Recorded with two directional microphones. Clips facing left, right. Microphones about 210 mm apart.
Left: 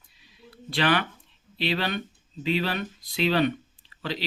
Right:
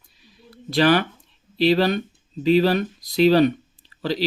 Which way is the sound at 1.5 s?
40° right (ahead or behind).